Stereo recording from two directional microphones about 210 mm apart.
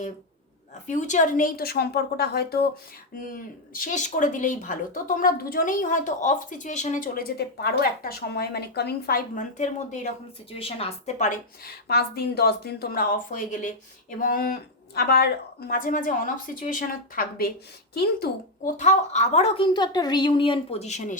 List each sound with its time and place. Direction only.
0.9 s a woman's voice: 35° left (ahead or behind)